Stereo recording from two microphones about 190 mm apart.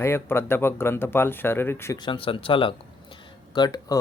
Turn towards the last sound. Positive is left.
turn(degrees=25)  # may be behind; listen again after turning